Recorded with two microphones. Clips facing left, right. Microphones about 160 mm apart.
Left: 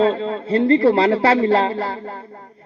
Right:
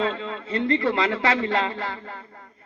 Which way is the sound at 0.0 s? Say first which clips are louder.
Left 9 dB; 35° left (ahead or behind).